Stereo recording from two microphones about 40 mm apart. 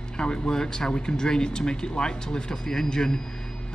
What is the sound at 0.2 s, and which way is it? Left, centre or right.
A man's voice, left.